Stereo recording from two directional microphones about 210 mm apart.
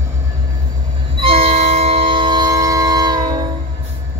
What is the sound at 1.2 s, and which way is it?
Train, 30° right (ahead or behind).